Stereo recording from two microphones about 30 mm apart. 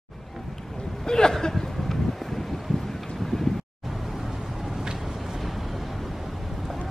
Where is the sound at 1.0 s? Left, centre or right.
Left.